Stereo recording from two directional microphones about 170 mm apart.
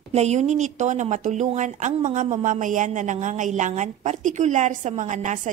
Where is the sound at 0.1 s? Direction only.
40° right (ahead or behind).